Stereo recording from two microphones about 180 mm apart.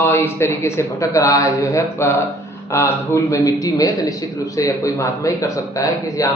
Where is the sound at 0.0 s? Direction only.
15° left (ahead or behind).